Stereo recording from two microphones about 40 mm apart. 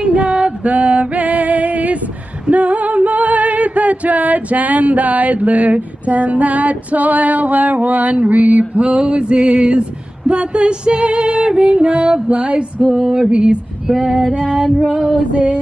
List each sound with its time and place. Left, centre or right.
0.0 s music: right
13.8 s female singing: centre
15.3 s music: right